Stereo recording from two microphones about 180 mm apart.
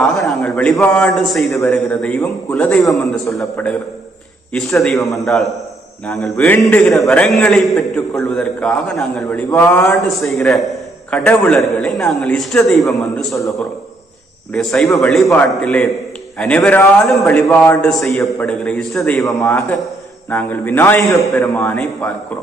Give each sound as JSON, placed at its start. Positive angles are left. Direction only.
{"t": 0.2, "sound": "a man's voice", "side_deg": 5}
{"t": 14.5, "sound": "a man's voice", "side_deg": 5}
{"t": 19.2, "sound": "a man's voice", "side_deg": 15}